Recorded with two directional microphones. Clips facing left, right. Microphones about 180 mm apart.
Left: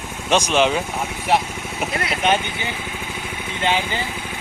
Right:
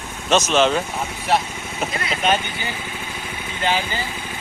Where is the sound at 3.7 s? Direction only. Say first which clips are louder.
Left 1 dB; 20° left (ahead or behind).